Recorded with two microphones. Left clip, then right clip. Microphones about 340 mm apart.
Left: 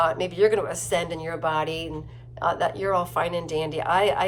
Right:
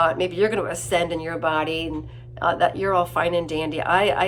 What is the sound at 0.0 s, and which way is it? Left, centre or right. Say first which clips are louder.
Speech: right 1 dB; centre.